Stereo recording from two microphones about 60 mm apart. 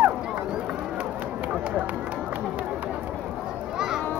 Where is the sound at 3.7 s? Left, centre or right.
Centre.